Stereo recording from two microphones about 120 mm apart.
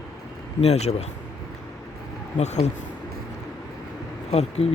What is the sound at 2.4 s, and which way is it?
Speech, 70° left (ahead or behind).